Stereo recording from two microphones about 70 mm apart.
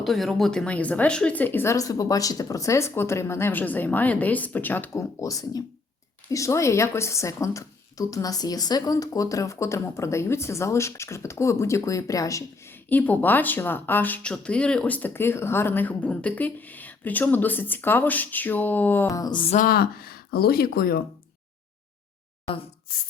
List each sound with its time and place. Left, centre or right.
0.0 s speech: centre
0.6 s speech: centre
1.6 s a woman's voice: left
3.5 s speech: left
4.9 s a woman's voice: left
12.6 s speech: left
14.2 s speech: centre
19.0 s a sound: left